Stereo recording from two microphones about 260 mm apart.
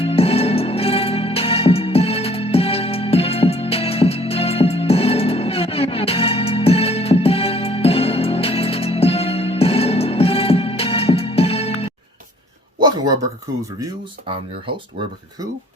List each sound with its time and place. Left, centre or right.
0.0 s music: left
13.7 s speech: centre